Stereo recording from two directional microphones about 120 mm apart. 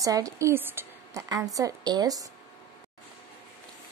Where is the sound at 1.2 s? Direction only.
30° right (ahead or behind).